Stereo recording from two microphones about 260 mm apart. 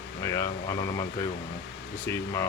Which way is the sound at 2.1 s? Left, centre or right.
Centre.